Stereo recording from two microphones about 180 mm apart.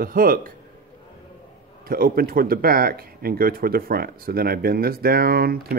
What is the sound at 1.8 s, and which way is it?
Speech, 55° right (ahead or behind).